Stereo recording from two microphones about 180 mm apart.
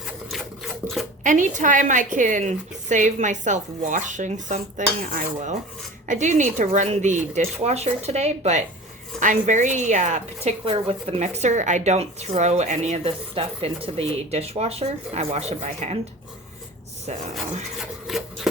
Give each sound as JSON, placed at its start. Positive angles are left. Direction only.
{"t": 0.3, "sound": "filing", "side_deg": 0}
{"t": 1.2, "sound": "a woman's voice", "side_deg": -45}
{"t": 18.1, "sound": "chopping", "side_deg": 0}